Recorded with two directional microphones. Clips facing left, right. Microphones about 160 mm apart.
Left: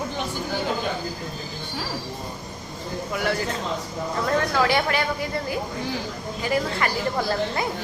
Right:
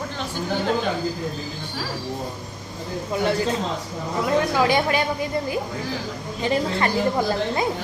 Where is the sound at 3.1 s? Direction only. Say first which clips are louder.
Right 4 dB; 25° right (ahead or behind).